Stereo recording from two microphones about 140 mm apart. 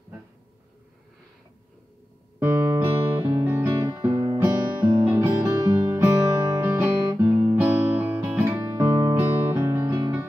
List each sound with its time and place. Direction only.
2.4 s music: 20° right (ahead or behind)